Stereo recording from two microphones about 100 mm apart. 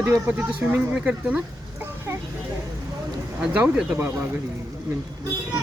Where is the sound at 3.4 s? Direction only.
10° right (ahead or behind).